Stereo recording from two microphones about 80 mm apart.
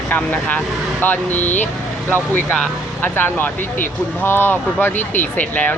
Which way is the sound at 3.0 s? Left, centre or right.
Left.